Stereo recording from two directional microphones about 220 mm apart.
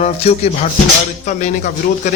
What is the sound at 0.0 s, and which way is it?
Speech, 30° left (ahead or behind).